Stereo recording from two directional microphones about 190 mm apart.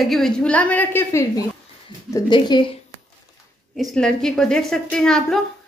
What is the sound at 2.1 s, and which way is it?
Speech, 25° left (ahead or behind).